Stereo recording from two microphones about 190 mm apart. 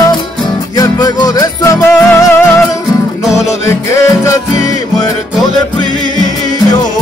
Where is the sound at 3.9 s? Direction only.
15° left (ahead or behind).